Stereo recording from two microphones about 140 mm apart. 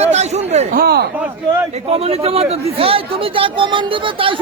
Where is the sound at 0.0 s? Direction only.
50° right (ahead or behind).